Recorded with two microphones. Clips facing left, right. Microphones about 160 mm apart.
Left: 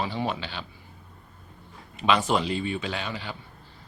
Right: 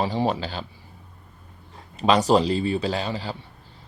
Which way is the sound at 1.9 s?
35° right (ahead or behind).